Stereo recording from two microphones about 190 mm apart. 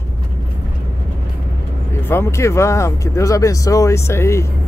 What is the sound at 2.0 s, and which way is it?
Speech, 15° left (ahead or behind).